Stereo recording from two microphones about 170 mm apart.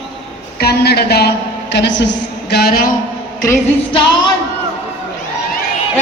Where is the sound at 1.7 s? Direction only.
90° left; by 2.9 s 60° left (ahead or behind).